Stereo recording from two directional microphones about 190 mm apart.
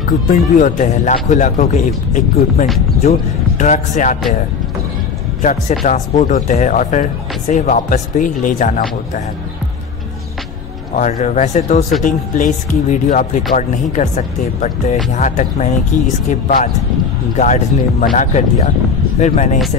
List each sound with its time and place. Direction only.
0.6 s speech: 40° left (ahead or behind)
5.4 s speech: 35° left (ahead or behind)
11.0 s speech: 35° left (ahead or behind)